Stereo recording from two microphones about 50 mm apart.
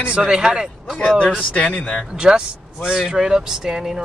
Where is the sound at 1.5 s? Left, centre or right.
Left.